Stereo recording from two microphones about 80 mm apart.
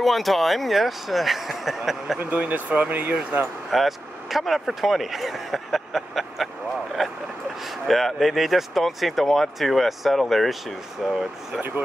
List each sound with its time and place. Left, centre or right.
0.0 s speech: centre
2.1 s speech: centre
3.7 s speech: centre
7.0 s vehicle: centre
7.6 s speech: centre